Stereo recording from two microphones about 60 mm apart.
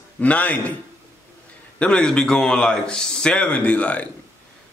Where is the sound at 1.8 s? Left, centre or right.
Centre.